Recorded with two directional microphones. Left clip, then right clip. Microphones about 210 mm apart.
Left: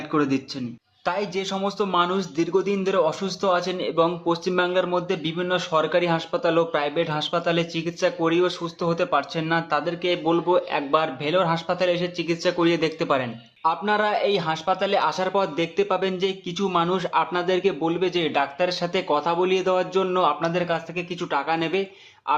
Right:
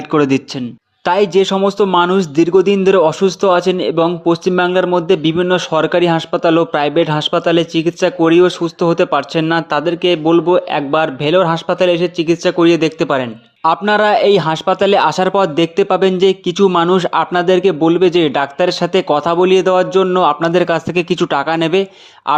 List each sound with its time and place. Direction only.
0.1 s a man's voice: 45° right (ahead or behind)